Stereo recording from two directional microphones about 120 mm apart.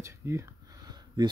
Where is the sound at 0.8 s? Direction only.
35° right (ahead or behind).